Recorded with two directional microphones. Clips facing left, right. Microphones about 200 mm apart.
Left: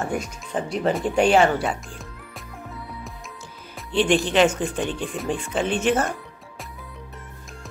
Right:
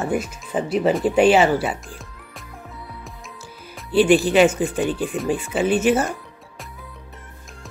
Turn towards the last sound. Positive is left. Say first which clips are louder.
# right 4 dB
turn(degrees=-5)  # may be behind; listen again after turning